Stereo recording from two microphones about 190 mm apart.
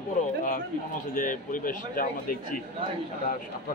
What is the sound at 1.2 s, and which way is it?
A man's voice, 45° left (ahead or behind).